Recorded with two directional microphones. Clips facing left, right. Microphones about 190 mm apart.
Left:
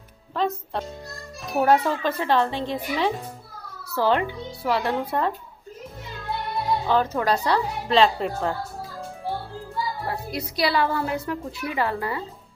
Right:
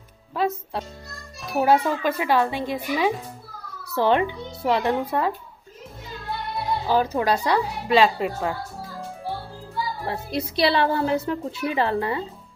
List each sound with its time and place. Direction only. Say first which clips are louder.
0.3 s a woman's voice: right 1 dB; 10° right (ahead or behind)
6.9 s a woman's voice: right 2 dB; 10° right (ahead or behind)
10.0 s a woman's voice: right 2 dB; 25° right (ahead or behind)